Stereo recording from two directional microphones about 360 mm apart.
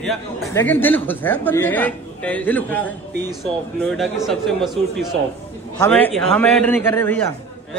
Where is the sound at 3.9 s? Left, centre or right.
Centre.